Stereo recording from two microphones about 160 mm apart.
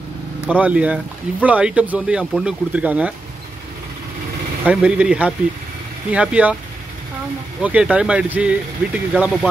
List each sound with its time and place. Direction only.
0.5 s speech: 10° right (ahead or behind)
4.6 s speech: 5° right (ahead or behind)
7.6 s speech: 5° right (ahead or behind)